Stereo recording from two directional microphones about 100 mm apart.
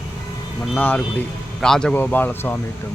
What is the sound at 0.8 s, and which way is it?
Speech, 15° left (ahead or behind).